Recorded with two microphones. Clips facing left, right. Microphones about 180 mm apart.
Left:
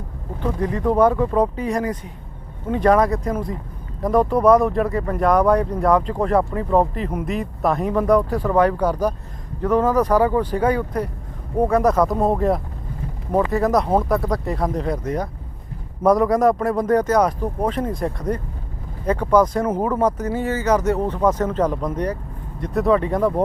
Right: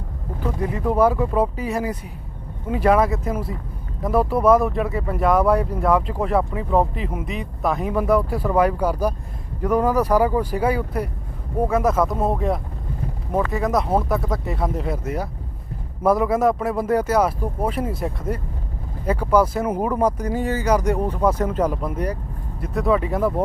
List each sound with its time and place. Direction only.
0.3 s speech: 5° right (ahead or behind)